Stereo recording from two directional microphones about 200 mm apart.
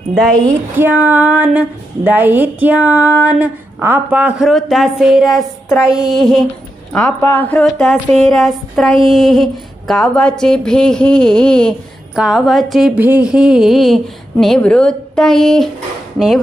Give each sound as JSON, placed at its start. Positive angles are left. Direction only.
{"t": 0.5, "sound": "speech", "side_deg": -10}